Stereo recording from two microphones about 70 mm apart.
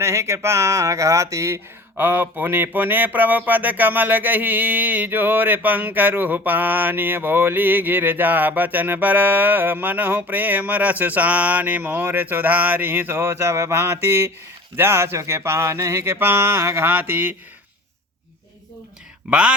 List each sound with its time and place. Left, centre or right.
0.0 s speech: right
2.0 s speech: right
14.8 s a sound: right
19.3 s speech: centre